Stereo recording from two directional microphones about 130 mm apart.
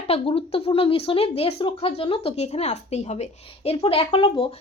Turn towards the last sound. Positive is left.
turn(degrees=45)  # may be behind; listen again after turning